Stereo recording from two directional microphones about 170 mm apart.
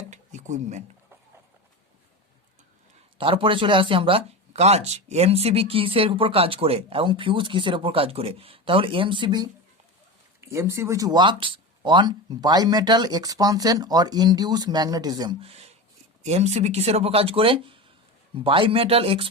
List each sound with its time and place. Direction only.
0.1 s a sound: 45° right (ahead or behind)
3.2 s speech: 30° right (ahead or behind)
10.4 s speech: 15° right (ahead or behind); by 19.3 s 35° right (ahead or behind)